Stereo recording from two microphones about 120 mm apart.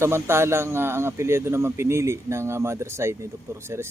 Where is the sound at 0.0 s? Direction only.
20° right (ahead or behind).